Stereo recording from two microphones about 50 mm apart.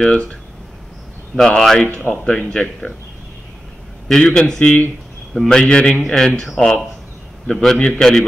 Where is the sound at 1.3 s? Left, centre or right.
Centre.